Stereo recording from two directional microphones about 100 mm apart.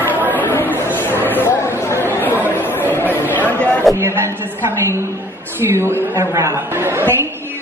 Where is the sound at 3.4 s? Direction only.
15° left (ahead or behind).